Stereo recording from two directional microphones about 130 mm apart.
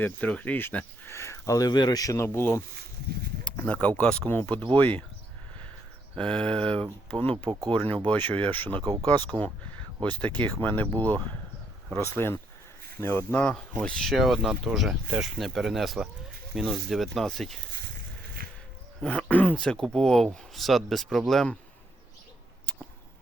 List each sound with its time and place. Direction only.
0.0 s speech: 10° left (ahead or behind)
6.1 s speech: 5° left (ahead or behind)
7.5 s speech: 25° right (ahead or behind)
8.1 s speech: 15° left (ahead or behind)
8.8 s speech: 30° right (ahead or behind)
10.0 s speech: 10° left (ahead or behind)
19.0 s speech: 10° left (ahead or behind)